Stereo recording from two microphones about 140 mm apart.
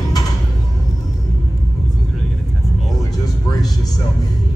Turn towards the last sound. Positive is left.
turn(degrees=25)  # may be behind; listen again after turning